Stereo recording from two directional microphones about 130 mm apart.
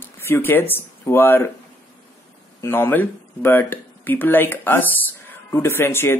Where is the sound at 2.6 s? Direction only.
15° left (ahead or behind).